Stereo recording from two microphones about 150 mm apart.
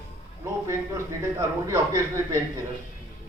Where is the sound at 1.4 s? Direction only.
20° right (ahead or behind).